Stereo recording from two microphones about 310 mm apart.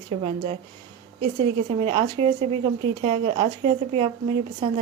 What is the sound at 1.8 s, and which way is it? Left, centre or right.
A woman's voice, centre.